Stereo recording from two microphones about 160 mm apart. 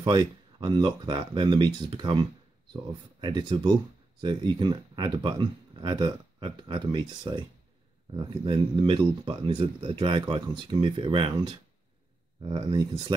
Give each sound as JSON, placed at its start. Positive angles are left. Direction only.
{"t": 0.0, "sound": "speech", "side_deg": -25}